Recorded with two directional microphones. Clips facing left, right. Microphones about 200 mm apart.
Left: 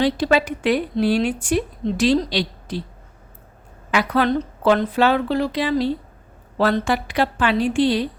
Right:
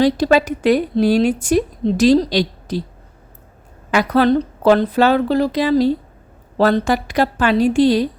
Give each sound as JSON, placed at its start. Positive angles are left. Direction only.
{"t": 0.0, "sound": "a woman's voice", "side_deg": -40}
{"t": 3.9, "sound": "a woman's voice", "side_deg": -40}